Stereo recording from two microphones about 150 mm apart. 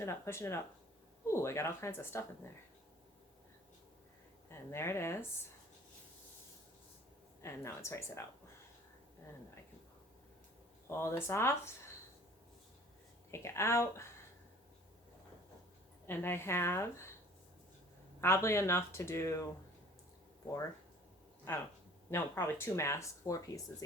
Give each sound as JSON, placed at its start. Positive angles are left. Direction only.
{"t": 0.0, "sound": "speech", "side_deg": 15}
{"t": 4.4, "sound": "speech", "side_deg": 15}
{"t": 7.4, "sound": "speech", "side_deg": 20}
{"t": 10.8, "sound": "speech", "side_deg": 20}
{"t": 13.3, "sound": "speech", "side_deg": 20}
{"t": 16.0, "sound": "speech", "side_deg": 15}
{"t": 18.2, "sound": "speech", "side_deg": 15}
{"t": 21.5, "sound": "speech", "side_deg": 15}